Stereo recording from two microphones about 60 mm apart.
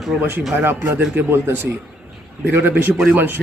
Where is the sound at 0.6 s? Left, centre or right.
Right.